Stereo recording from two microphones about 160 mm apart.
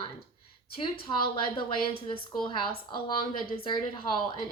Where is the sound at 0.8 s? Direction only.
30° left (ahead or behind).